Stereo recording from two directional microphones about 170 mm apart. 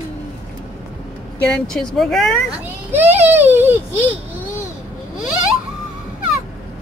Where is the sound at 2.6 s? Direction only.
10° right (ahead or behind).